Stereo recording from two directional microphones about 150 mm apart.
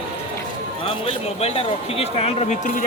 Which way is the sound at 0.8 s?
35° left (ahead or behind).